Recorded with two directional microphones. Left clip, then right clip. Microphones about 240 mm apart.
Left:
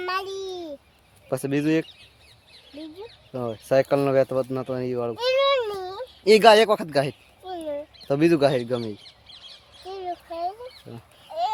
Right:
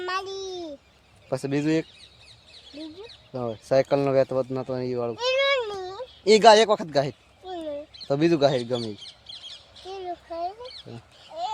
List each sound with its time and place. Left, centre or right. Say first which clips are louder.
0.0 s babbling: left 2 dB; centre
1.3 s speech: left 2 dB; centre
3.3 s speech: left 1 dB; centre
9.0 s bird: right 4 dB; right
9.9 s a sound: left 2 dB; centre
11.3 s a sound: left 5 dB; left